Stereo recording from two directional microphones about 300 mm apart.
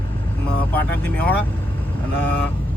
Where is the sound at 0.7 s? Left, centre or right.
Centre.